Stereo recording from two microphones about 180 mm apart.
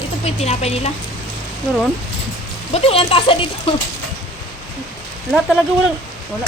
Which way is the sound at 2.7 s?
35° left (ahead or behind).